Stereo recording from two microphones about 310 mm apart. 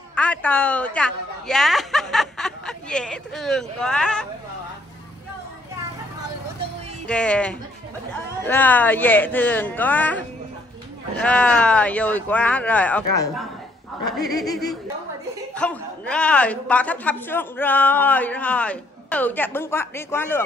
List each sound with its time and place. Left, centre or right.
0.1 s a man's voice: centre
7.1 s a man's voice: centre
15.5 s a man's voice: centre